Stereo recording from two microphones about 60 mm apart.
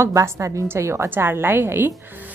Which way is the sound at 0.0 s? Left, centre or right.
Right.